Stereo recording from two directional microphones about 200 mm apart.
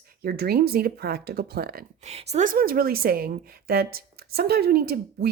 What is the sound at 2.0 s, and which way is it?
A woman's voice, 35° right (ahead or behind).